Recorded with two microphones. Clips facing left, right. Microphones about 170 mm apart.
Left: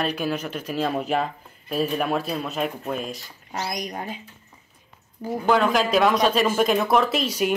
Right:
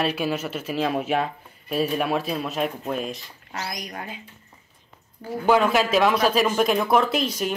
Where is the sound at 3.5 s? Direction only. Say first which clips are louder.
Left 4 dB; 25° left (ahead or behind).